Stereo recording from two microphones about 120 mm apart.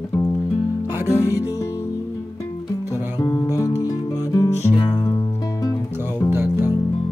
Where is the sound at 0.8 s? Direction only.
20° right (ahead or behind).